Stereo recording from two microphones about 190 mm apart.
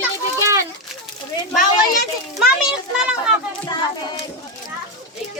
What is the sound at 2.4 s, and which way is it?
Children playing, centre (ahead or behind).